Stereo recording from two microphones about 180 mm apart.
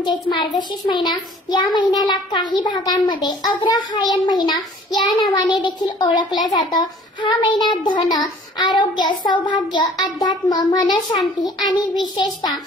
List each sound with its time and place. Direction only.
0.0 s a child's voice: 25° left (ahead or behind)